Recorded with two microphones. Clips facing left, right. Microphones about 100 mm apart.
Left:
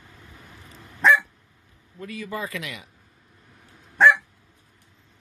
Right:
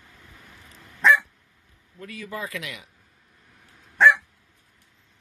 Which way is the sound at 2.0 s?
5° left (ahead or behind).